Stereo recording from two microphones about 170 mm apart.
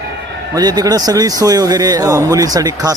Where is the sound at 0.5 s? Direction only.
25° right (ahead or behind).